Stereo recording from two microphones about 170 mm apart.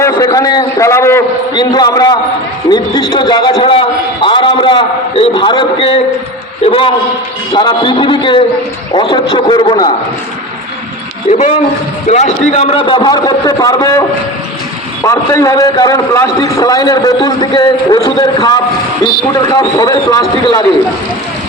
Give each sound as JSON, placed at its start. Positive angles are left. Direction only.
{"t": 0.0, "sound": "a man's voice", "side_deg": 20}
{"t": 11.3, "sound": "a man's voice", "side_deg": 45}
{"t": 15.0, "sound": "a man's voice", "side_deg": 20}